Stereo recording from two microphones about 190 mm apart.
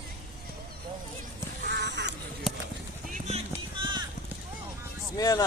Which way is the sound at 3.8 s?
25° right (ahead or behind).